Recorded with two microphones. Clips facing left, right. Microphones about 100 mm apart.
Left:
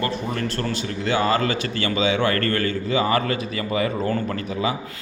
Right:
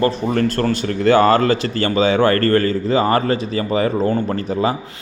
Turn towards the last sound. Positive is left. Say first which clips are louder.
# right 6 dB
turn(degrees=-40)  # may be behind; listen again after turning